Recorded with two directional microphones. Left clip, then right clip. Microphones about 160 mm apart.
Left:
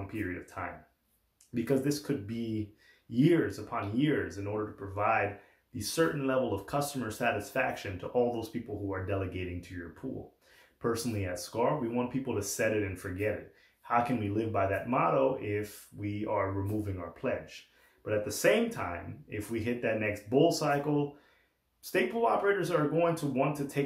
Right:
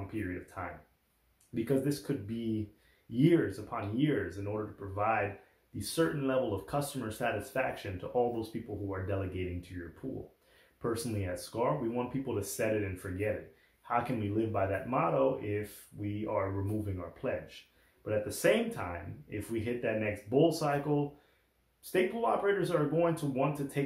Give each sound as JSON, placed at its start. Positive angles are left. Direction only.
{"t": 0.6, "sound": "speech", "side_deg": 5}
{"t": 10.8, "sound": "speech", "side_deg": 5}
{"t": 21.9, "sound": "speech", "side_deg": 10}